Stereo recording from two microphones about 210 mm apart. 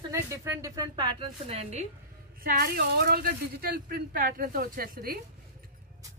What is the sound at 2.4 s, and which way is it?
A woman's voice, 45° right (ahead or behind).